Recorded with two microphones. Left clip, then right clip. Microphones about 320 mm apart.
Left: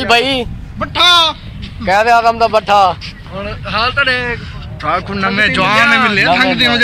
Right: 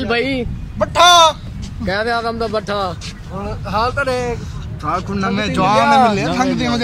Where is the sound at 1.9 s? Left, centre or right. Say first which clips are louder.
Left 9 dB; centre.